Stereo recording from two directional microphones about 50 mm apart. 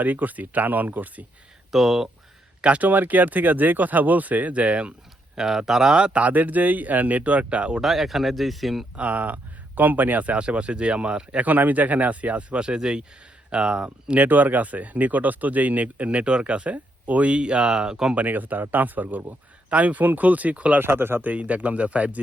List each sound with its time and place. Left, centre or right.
0.0 s speech: right
1.7 s speech: centre
2.6 s speech: right
2.8 s speech: right
5.4 s speech: centre
6.1 s speech: right
7.8 s speech: centre
9.0 s speech: right
11.4 s speech: right; by 14.2 s centre
14.2 s speech: right; by 18.1 s centre
18.1 s speech: right
20.8 s speech: right
21.3 s speech: right